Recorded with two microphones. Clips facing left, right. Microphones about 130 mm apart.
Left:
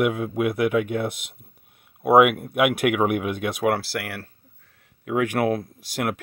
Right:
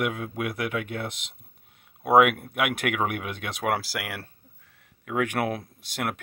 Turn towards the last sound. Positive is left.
turn(degrees=0)  # may be behind; listen again after turning